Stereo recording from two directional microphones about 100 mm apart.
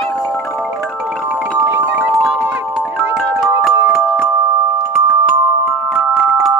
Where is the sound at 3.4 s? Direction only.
5° right (ahead or behind).